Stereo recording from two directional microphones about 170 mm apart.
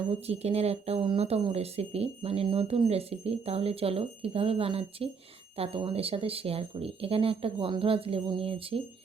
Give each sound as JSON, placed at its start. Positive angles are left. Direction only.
{"t": 0.1, "sound": "speech", "side_deg": -35}